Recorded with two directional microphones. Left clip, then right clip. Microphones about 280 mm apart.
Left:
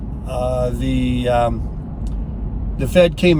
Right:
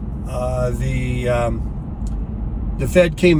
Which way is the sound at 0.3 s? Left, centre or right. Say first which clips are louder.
Left 2 dB; centre.